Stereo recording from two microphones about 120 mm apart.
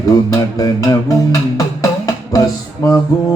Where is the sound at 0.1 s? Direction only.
30° left (ahead or behind).